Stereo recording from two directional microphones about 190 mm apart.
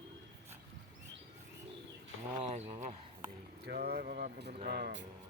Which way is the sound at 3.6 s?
60° right (ahead or behind).